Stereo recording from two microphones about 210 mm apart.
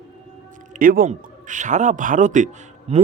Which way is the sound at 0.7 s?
40° right (ahead or behind).